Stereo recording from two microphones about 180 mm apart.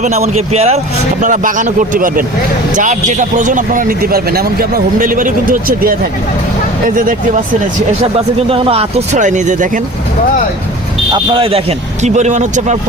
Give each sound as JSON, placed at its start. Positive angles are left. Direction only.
{"t": 0.0, "sound": "a man's voice", "side_deg": -40}
{"t": 8.1, "sound": "speech", "side_deg": -30}
{"t": 11.1, "sound": "speech", "side_deg": -30}